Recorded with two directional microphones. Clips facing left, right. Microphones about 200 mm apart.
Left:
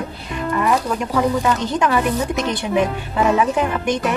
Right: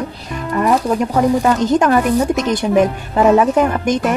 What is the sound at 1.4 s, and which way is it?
Speech, 45° right (ahead or behind).